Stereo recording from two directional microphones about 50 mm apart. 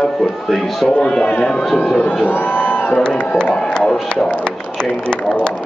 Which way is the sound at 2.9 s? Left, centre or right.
Centre.